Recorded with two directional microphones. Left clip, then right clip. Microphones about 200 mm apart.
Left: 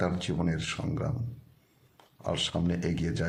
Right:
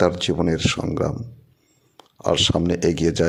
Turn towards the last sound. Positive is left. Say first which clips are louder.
# right 14 dB
turn(degrees=-45)  # may be behind; listen again after turning